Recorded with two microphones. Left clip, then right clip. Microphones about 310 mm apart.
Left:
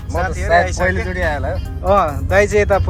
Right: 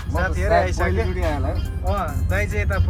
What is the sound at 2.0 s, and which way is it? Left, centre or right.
Speech, left.